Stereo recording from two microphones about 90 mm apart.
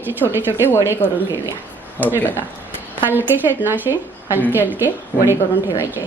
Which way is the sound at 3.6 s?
20° right (ahead or behind).